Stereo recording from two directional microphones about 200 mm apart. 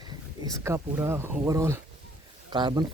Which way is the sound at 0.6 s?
15° right (ahead or behind).